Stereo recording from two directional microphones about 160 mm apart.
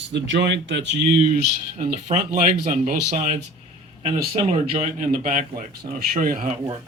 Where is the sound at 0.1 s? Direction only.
90° right.